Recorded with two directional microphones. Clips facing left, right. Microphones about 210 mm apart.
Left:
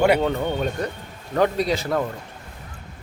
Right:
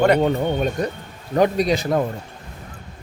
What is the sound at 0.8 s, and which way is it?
A man's voice, 15° right (ahead or behind).